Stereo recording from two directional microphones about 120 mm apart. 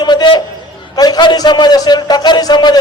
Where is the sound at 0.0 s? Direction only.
35° left (ahead or behind).